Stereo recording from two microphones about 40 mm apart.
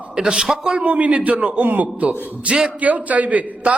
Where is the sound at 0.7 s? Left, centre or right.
Right.